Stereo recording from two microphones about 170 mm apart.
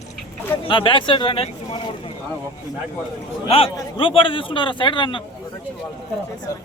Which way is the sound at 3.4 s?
35° left (ahead or behind).